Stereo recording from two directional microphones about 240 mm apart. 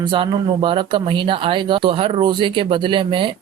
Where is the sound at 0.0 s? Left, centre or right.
Centre.